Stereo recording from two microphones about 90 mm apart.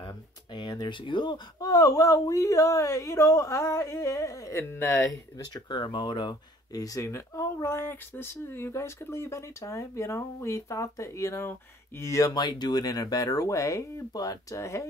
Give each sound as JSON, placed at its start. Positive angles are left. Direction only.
{"t": 0.0, "sound": "a sound", "side_deg": 55}
{"t": 1.6, "sound": "speech", "side_deg": 45}
{"t": 5.5, "sound": "speech", "side_deg": 55}